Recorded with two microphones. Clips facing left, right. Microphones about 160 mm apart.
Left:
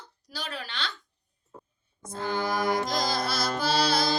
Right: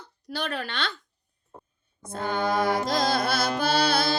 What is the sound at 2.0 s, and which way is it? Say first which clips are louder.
Speech: right 1 dB; 55° right (ahead or behind).